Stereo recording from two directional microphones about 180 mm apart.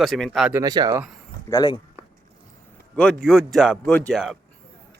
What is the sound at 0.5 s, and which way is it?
Speech, 20° right (ahead or behind).